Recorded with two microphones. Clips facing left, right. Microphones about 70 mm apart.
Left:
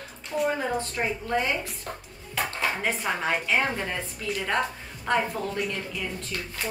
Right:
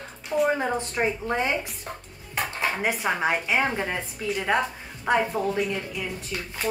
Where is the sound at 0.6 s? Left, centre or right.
Right.